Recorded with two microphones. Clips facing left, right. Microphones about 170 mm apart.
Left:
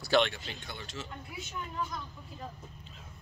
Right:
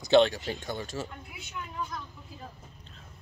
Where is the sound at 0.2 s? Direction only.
40° right (ahead or behind).